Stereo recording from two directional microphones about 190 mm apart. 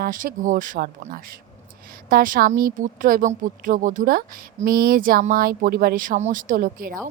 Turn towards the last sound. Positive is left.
turn(degrees=-50)  # may be behind; listen again after turning